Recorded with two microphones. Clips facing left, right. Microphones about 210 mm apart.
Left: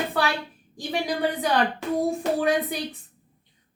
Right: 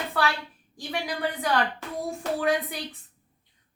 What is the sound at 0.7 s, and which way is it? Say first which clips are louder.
A woman's voice: left 5 dB; 20° left (ahead or behind).